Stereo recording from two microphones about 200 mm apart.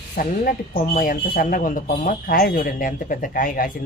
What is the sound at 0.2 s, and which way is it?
Speech, 45° left (ahead or behind).